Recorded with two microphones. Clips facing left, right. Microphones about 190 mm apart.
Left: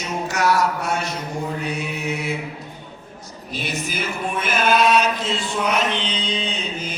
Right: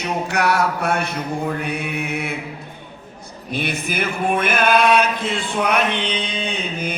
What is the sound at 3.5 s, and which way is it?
Chant, 60° right (ahead or behind).